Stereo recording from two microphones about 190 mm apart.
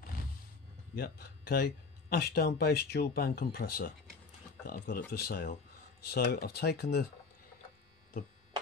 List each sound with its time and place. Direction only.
0.9 s speech: 55° left (ahead or behind)